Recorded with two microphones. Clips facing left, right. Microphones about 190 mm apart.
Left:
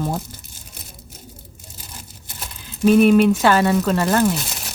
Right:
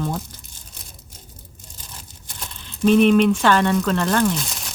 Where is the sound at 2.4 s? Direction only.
5° left (ahead or behind).